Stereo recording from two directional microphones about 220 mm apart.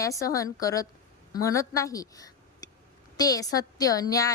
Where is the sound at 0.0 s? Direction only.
15° left (ahead or behind).